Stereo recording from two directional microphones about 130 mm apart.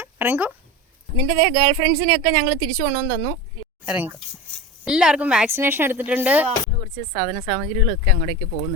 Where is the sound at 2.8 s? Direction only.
45° right (ahead or behind).